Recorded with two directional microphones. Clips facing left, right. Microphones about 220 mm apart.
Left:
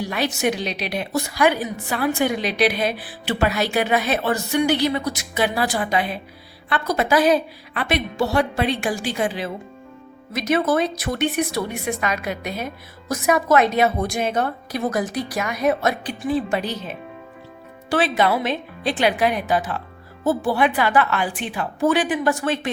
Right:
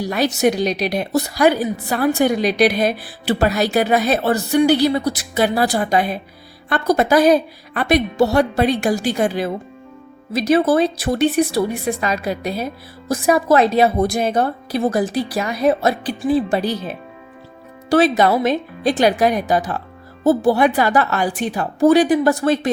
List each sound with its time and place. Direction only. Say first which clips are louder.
0.0 s a woman's voice: right 5 dB; 40° right (ahead or behind)
10.3 s a woman's voice: right 5 dB; 30° right (ahead or behind)